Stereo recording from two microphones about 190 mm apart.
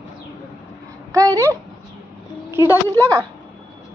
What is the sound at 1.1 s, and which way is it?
Speech, 15° right (ahead or behind).